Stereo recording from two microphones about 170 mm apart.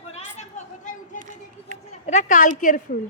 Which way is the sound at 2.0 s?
45° left (ahead or behind).